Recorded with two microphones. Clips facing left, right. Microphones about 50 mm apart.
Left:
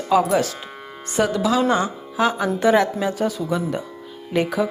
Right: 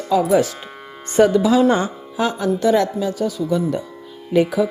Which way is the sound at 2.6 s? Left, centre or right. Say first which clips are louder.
Even; left.